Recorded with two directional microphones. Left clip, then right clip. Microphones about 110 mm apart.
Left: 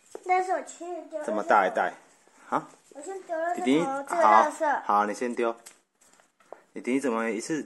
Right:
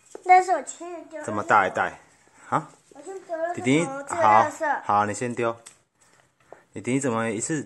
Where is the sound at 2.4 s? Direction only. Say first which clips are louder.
Right 3 dB; 15° right (ahead or behind).